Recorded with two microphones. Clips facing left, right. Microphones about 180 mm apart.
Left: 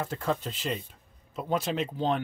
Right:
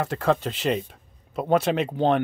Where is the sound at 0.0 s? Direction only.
75° right (ahead or behind).